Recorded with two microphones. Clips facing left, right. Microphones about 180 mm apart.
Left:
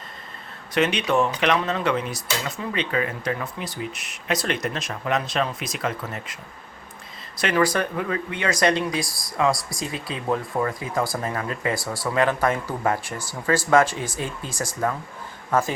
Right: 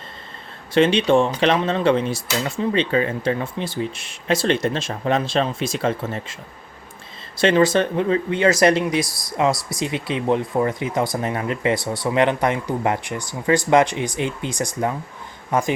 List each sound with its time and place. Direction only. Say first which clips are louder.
0.7 s speech: right 6 dB; 30° right (ahead or behind)
7.3 s speech: right 6 dB; 25° right (ahead or behind)